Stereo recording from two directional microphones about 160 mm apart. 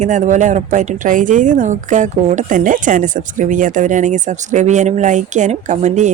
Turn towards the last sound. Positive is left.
turn(degrees=-50)  # may be behind; listen again after turning